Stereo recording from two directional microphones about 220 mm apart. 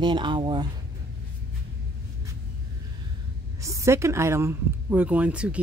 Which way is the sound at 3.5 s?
15° right (ahead or behind).